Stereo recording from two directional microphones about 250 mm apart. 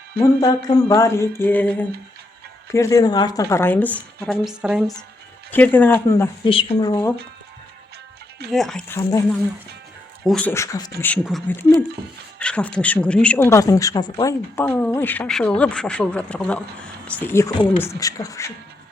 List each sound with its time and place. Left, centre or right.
0.2 s a woman's voice: centre
8.4 s speech: centre
10.2 s a woman's voice: centre